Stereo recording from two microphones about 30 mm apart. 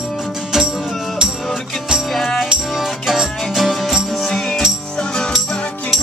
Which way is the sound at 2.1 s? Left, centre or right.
Centre.